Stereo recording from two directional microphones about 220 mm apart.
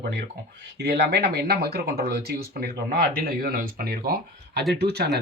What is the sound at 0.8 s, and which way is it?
Speech, 50° right (ahead or behind).